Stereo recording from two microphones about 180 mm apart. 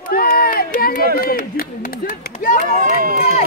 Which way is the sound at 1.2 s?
55° left (ahead or behind).